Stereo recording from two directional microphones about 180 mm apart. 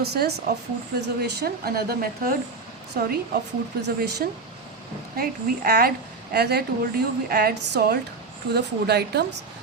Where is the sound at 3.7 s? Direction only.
60° right (ahead or behind).